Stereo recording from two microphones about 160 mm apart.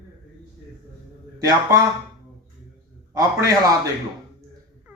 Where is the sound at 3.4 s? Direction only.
20° right (ahead or behind).